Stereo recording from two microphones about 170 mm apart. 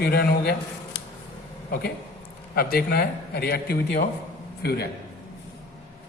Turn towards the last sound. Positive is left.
turn(degrees=70)  # may be behind; listen again after turning